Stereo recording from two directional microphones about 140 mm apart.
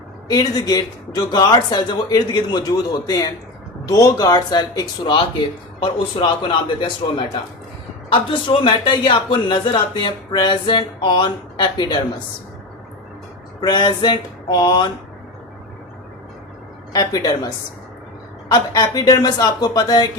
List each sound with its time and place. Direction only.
0.3 s a man's voice: 25° left (ahead or behind)
13.6 s speech: 30° left (ahead or behind)
16.9 s a man's voice: 25° left (ahead or behind)